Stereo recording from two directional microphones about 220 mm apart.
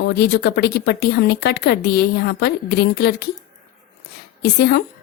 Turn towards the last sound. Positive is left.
turn(degrees=50)  # may be behind; listen again after turning